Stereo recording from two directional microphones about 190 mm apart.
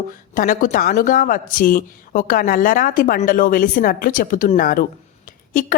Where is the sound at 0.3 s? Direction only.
45° left (ahead or behind).